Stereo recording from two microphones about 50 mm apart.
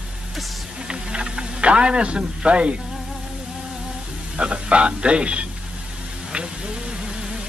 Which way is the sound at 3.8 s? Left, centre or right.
Right.